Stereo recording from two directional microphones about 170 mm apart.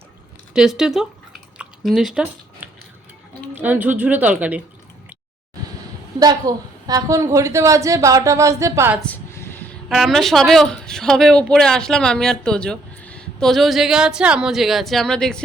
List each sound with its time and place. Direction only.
0.5 s drip: 5° right (ahead or behind)
3.5 s speech: 10° right (ahead or behind)
6.1 s a woman's voice: 20° right (ahead or behind)
9.0 s a sound: 10° left (ahead or behind)
9.9 s speech: centre (ahead or behind)